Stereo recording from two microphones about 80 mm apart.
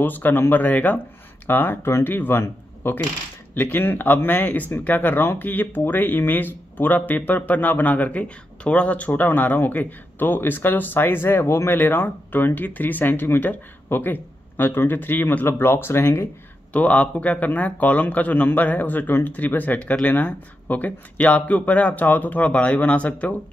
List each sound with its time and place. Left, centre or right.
0.0 s speech: left
16.7 s speech: centre